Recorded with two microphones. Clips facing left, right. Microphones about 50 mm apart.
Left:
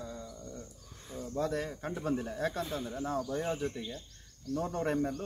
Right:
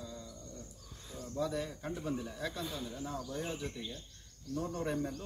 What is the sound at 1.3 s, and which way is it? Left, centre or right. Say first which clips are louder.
Speech: left 3 dB; left.